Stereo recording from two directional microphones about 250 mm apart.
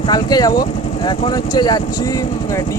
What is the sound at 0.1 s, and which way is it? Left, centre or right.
Speech, centre.